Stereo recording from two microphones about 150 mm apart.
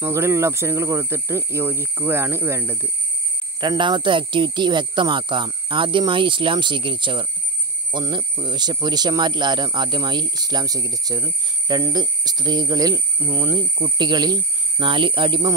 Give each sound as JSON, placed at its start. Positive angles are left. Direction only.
{"t": 0.0, "sound": "speech", "side_deg": -20}
{"t": 3.6, "sound": "speech", "side_deg": -30}